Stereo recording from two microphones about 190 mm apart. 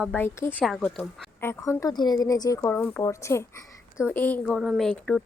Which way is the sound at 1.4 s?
15° left (ahead or behind).